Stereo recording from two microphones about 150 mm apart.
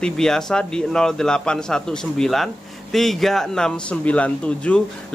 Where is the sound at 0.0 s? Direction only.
5° left (ahead or behind).